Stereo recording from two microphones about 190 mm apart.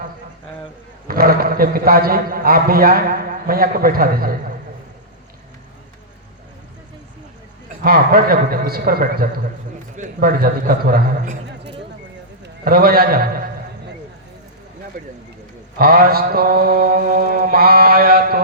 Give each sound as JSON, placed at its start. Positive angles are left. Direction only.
{"t": 1.0, "sound": "a man's voice", "side_deg": -50}
{"t": 7.9, "sound": "a man's voice", "side_deg": -50}
{"t": 15.8, "sound": "a man's voice", "side_deg": -50}